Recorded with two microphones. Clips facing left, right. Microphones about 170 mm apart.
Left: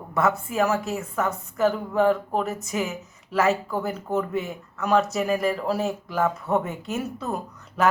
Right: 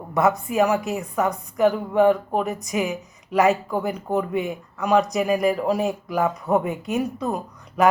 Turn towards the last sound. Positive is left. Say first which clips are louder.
# right 4 dB
turn(degrees=-10)  # may be behind; listen again after turning